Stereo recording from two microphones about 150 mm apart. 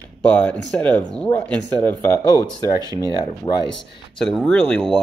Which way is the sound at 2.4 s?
25° left (ahead or behind).